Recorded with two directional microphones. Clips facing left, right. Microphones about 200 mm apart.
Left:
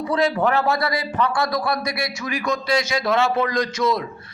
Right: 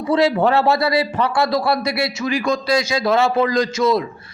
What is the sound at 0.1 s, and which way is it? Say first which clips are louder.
A man's voice: right 5 dB; 25° right (ahead or behind).